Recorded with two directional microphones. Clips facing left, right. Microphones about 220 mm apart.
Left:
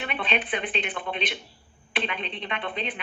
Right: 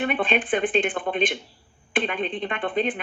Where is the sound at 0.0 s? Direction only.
50° right (ahead or behind).